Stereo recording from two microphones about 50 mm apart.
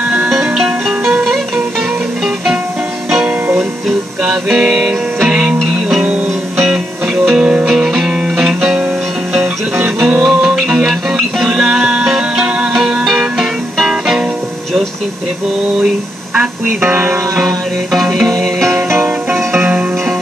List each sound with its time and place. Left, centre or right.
0.3 s music: centre
4.2 s music: centre
5.6 s music: centre
7.6 s music: centre
10.2 s music: centre
16.6 s music: right
17.4 s music: centre